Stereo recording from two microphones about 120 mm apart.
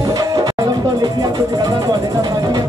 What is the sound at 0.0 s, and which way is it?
Music, 30° right (ahead or behind).